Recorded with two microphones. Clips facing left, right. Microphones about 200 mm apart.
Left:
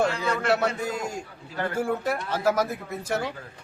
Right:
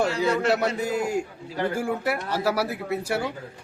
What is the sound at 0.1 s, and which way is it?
Speech, 35° right (ahead or behind).